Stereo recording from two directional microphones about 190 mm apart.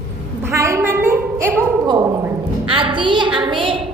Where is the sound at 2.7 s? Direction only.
25° right (ahead or behind).